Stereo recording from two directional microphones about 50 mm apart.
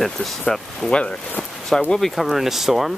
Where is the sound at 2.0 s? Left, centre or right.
Centre.